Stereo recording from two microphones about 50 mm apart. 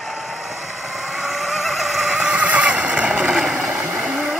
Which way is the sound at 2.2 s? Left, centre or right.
Right.